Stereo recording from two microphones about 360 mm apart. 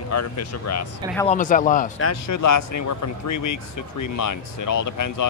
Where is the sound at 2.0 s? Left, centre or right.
Left.